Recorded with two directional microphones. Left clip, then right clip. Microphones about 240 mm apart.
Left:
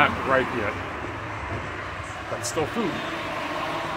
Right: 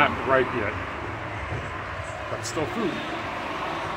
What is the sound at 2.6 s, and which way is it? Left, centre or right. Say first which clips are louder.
Speech: left 2 dB; centre.